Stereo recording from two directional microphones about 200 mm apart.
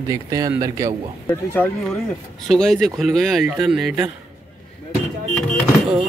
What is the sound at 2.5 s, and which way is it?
Speech, centre (ahead or behind).